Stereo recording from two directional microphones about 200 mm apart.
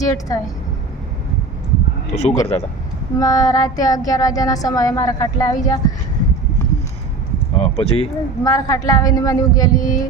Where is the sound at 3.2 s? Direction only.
15° left (ahead or behind).